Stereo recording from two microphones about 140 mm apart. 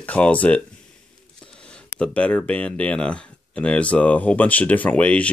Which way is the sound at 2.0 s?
10° left (ahead or behind).